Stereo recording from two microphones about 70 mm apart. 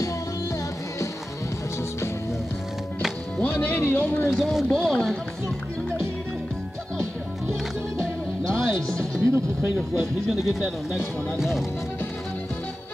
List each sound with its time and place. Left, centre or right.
3.3 s music: left
3.8 s speech: left
4.3 s speech: centre
4.6 s speech: centre
8.5 s music: centre
9.1 s speech: right
10.3 s speech: centre